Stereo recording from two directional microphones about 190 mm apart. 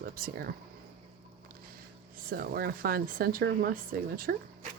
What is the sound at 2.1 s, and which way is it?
Speech, 50° right (ahead or behind).